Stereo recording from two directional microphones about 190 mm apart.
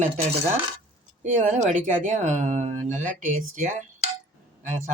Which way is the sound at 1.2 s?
40° right (ahead or behind).